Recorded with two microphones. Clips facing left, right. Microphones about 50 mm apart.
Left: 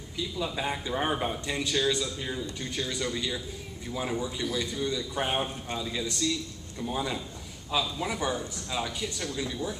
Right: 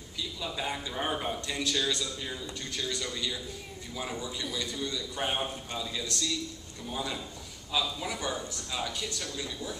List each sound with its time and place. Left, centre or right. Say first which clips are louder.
0.4 s a man's voice: left 3 dB; centre